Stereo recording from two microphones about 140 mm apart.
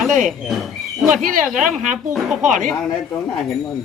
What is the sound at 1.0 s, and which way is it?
Speech, 70° right (ahead or behind).